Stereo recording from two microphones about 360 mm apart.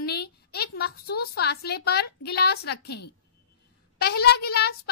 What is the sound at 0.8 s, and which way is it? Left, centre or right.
A child's voice, left.